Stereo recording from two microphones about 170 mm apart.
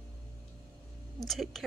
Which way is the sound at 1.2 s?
Centre (ahead or behind).